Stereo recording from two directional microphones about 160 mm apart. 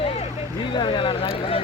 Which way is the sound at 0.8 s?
30° left (ahead or behind).